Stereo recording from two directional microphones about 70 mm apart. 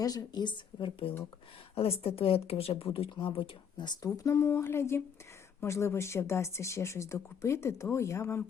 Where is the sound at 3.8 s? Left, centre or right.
Left.